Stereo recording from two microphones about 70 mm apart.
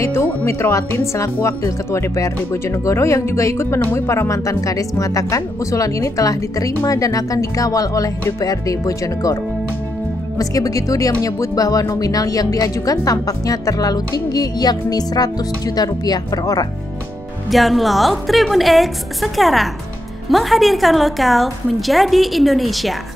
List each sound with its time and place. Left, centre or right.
0.0 s speech: left
4.3 s speech: left
17.5 s a woman's voice: centre